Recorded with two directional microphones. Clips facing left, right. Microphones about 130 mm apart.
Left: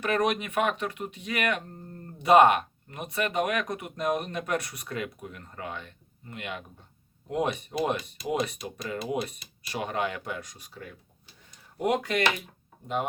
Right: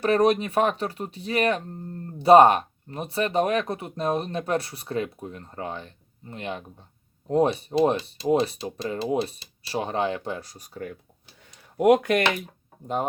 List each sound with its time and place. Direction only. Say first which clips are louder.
0.0 s speech: right 6 dB; 35° right (ahead or behind)
11.8 s speech: right 7 dB; 55° right (ahead or behind)